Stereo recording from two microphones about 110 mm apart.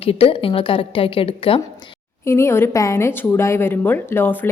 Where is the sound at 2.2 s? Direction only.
25° left (ahead or behind).